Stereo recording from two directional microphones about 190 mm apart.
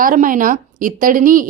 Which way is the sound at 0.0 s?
45° right (ahead or behind).